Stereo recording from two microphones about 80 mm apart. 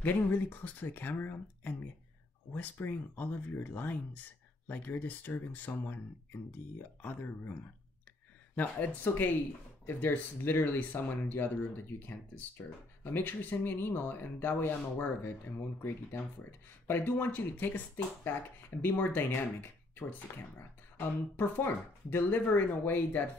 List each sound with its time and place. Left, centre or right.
0.0 s speech: left
7.0 s speech: left
8.5 s speech: left